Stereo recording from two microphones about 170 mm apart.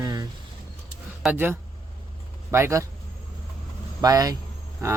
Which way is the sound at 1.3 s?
10° right (ahead or behind).